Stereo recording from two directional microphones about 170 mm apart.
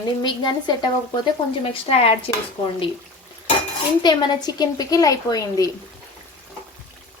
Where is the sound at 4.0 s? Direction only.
25° left (ahead or behind).